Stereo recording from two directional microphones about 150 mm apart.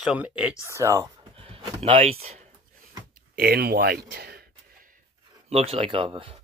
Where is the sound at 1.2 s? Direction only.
40° right (ahead or behind).